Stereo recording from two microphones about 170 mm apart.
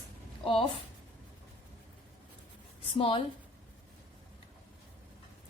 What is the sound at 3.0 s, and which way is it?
Speech, 30° left (ahead or behind).